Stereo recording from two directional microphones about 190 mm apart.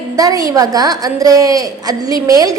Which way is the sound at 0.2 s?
20° right (ahead or behind).